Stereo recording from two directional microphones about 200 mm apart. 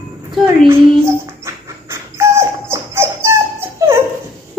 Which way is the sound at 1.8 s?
15° right (ahead or behind).